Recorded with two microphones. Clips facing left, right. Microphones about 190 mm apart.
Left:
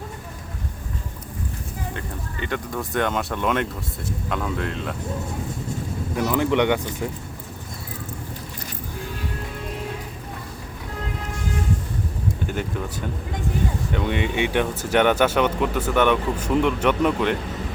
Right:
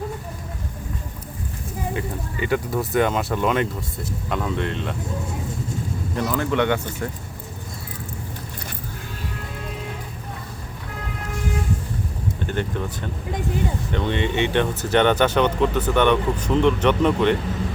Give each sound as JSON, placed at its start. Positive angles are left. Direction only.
{"t": 1.9, "sound": "speech", "side_deg": -10}
{"t": 6.3, "sound": "speech", "side_deg": 15}
{"t": 12.5, "sound": "speech", "side_deg": 5}